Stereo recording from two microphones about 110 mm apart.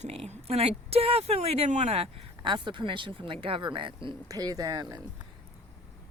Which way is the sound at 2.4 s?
45° right (ahead or behind).